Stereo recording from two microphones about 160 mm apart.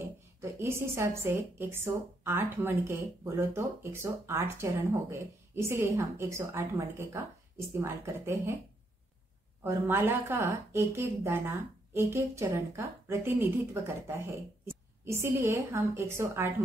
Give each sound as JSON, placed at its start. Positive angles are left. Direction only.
{"t": 0.0, "sound": "a woman's voice", "side_deg": -15}
{"t": 9.6, "sound": "a woman's voice", "side_deg": -15}
{"t": 15.0, "sound": "a woman's voice", "side_deg": -15}